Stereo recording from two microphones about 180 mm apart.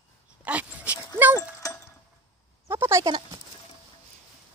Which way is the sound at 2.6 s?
15° right (ahead or behind).